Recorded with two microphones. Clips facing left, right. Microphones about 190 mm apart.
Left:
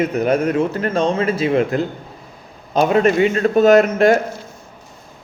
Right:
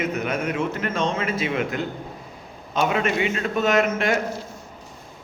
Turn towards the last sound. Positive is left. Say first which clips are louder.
# left 9 dB
turn(degrees=40)  # may be behind; listen again after turning